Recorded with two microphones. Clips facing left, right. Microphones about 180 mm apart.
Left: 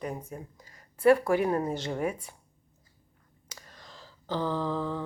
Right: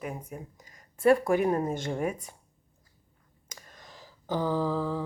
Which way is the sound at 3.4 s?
45° right (ahead or behind).